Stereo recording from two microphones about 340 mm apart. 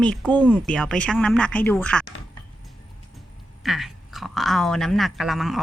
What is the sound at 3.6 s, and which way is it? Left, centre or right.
Speech, centre.